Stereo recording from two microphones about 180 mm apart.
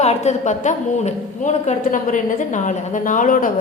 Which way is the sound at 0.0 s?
40° left (ahead or behind).